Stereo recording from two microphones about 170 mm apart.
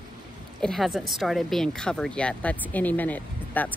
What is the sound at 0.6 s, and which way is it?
A woman's voice, centre (ahead or behind).